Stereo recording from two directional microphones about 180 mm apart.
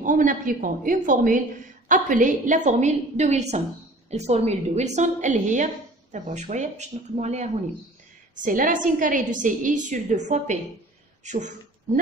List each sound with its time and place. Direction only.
0.0 s a woman's voice: 45° right (ahead or behind)